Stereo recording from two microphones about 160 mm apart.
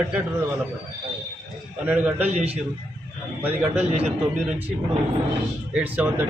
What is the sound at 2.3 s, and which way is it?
Speech, 40° right (ahead or behind).